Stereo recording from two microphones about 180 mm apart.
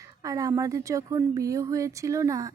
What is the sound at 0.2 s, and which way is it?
A woman's voice, 20° right (ahead or behind).